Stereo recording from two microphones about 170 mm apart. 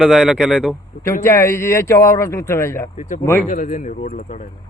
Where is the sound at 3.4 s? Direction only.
45° left (ahead or behind).